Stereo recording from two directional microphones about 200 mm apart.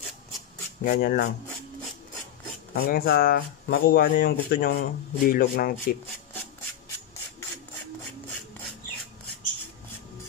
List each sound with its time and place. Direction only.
0.8 s speech: 50° left (ahead or behind)
2.7 s speech: 50° left (ahead or behind)